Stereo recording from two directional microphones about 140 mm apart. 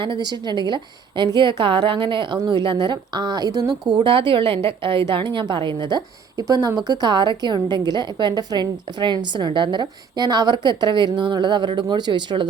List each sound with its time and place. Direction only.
0.0 s a woman's voice: 35° right (ahead or behind)